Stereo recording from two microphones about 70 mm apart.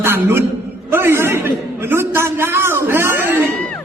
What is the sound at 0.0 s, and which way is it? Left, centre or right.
A man's voice, right.